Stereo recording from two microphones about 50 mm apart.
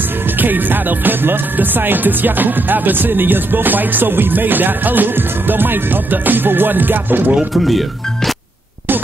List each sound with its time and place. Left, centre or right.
0.4 s music: right
7.5 s speech: centre